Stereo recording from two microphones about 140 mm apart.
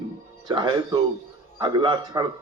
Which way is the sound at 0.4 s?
35° right (ahead or behind).